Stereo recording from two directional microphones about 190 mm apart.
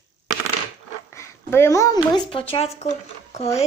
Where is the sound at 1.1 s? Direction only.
15° left (ahead or behind).